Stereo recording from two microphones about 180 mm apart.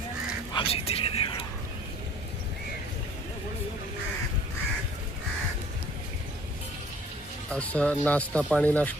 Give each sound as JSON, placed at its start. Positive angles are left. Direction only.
{"t": 0.5, "sound": "speech", "side_deg": 30}
{"t": 7.5, "sound": "speech", "side_deg": 5}